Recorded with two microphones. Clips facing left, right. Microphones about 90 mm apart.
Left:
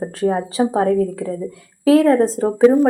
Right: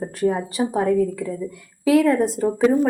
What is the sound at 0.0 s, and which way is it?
A woman's voice, 30° left (ahead or behind).